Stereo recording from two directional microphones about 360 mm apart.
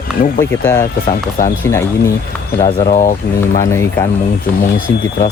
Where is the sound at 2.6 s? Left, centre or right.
Centre.